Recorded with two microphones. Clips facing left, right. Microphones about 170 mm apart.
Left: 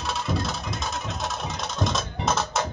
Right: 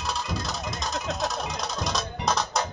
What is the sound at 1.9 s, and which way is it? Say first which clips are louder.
Music: even; centre (ahead or behind).